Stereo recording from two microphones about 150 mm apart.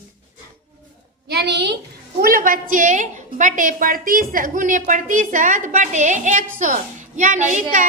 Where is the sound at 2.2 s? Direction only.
70° right (ahead or behind).